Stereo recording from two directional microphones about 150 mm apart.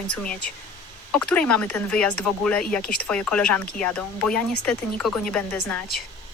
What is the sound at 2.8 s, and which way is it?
Speech, 90° left.